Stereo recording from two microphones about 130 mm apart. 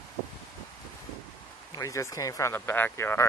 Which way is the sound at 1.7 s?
25° left (ahead or behind).